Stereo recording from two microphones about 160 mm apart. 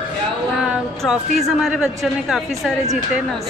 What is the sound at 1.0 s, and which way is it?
A woman's voice, centre (ahead or behind).